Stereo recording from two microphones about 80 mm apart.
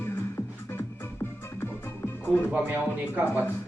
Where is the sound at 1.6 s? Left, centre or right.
Left.